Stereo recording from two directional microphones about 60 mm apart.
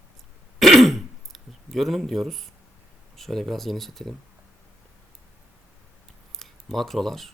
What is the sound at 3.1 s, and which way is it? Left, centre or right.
Speech, centre.